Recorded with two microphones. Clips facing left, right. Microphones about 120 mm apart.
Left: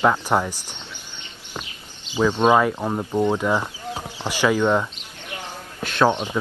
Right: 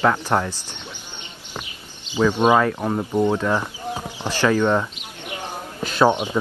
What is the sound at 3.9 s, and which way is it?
Basketball bounce, 15° right (ahead or behind).